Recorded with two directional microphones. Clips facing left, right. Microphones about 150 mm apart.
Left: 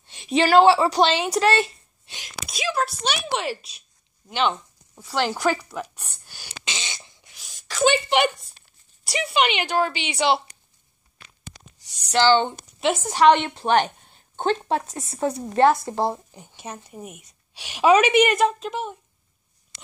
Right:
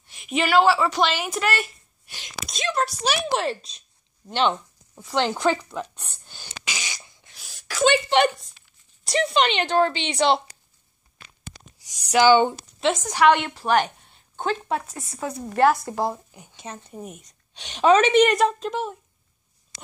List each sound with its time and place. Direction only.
0.0 s a woman's voice: 30° left (ahead or behind)
2.5 s a woman's voice: 5° left (ahead or behind)
4.9 s speech: 20° right (ahead or behind)
6.6 s fart: 25° left (ahead or behind)
7.7 s a woman's voice: 5° left (ahead or behind)
11.8 s a sound: 10° right (ahead or behind)
12.8 s a woman's voice: 10° left (ahead or behind)
13.3 s a woman's voice: 25° left (ahead or behind)
16.1 s a woman's voice: 15° left (ahead or behind)